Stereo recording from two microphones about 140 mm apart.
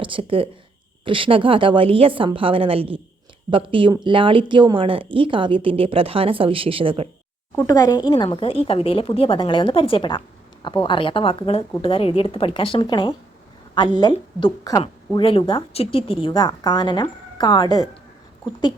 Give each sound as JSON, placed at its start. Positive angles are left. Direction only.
{"t": 0.0, "sound": "speech", "side_deg": -40}
{"t": 7.7, "sound": "a woman's voice", "side_deg": 25}
{"t": 14.6, "sound": "a woman's voice", "side_deg": 25}
{"t": 15.2, "sound": "a woman's voice", "side_deg": 40}